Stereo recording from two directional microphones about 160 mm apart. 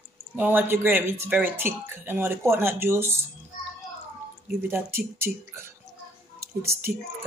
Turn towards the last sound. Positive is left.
turn(degrees=-15)  # may be behind; listen again after turning